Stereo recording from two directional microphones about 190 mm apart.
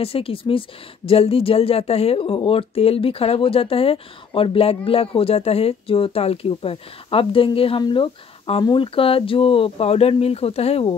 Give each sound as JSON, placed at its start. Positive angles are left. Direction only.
{"t": 0.0, "sound": "speech", "side_deg": 30}